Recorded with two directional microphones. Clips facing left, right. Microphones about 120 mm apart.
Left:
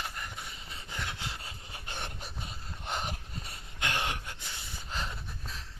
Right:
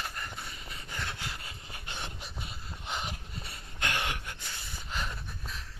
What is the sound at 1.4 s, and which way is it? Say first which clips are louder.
Rub: even; 35° left (ahead or behind).